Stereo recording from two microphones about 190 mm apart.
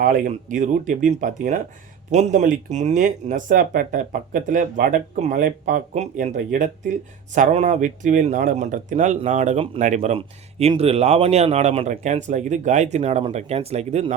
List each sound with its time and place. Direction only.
0.0 s speech: 45° right (ahead or behind)